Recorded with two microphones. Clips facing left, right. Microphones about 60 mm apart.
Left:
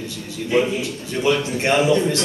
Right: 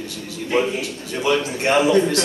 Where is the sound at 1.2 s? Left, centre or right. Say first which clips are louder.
Left 1 dB; right.